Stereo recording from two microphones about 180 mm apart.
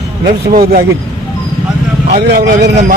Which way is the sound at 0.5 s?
60° right (ahead or behind).